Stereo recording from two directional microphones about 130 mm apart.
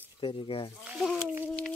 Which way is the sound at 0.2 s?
40° left (ahead or behind).